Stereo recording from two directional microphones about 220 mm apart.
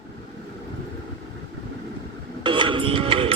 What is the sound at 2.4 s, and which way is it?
Music, 20° right (ahead or behind).